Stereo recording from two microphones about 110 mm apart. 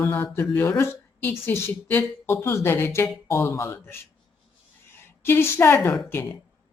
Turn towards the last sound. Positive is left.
turn(degrees=20)  # may be behind; listen again after turning